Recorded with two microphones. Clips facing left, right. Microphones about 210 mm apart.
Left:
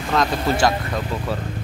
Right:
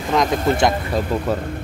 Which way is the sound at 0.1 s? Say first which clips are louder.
Right 3 dB; 20° right (ahead or behind).